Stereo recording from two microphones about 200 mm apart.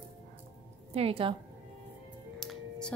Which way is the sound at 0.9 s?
30° right (ahead or behind).